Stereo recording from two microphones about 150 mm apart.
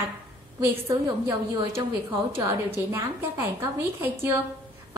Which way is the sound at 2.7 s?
15° right (ahead or behind).